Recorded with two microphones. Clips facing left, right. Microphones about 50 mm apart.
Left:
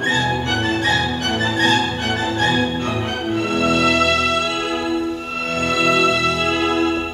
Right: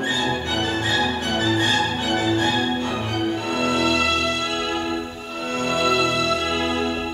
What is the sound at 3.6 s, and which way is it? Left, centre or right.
Music, left.